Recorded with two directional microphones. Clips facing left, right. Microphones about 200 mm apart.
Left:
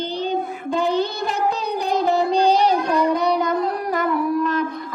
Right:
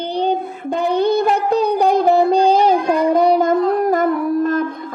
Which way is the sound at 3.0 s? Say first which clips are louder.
Right 6 dB; 50° right (ahead or behind).